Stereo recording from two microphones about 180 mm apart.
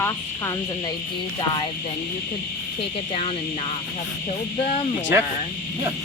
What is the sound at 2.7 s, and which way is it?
Speech, 35° left (ahead or behind).